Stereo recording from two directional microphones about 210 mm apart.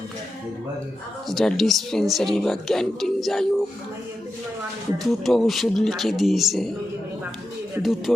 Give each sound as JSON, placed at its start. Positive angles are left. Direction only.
{"t": 1.3, "sound": "speech", "side_deg": 0}
{"t": 5.0, "sound": "speech", "side_deg": 0}
{"t": 7.8, "sound": "speech", "side_deg": 0}